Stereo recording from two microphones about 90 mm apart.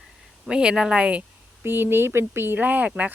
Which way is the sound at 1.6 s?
25° right (ahead or behind).